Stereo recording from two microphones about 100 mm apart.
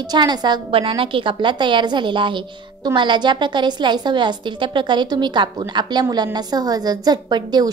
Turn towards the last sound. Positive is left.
turn(degrees=-45)  # may be behind; listen again after turning